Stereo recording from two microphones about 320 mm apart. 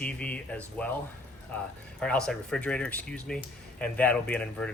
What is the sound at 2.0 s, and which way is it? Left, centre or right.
Speech, centre.